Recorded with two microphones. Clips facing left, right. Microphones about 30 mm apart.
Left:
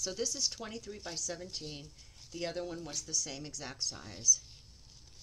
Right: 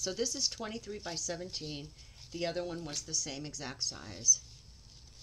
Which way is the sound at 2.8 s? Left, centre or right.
Right.